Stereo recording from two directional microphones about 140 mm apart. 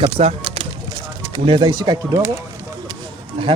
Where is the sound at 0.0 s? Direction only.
45° right (ahead or behind).